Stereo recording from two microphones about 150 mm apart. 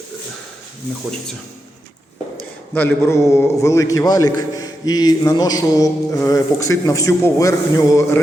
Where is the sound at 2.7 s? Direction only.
10° left (ahead or behind).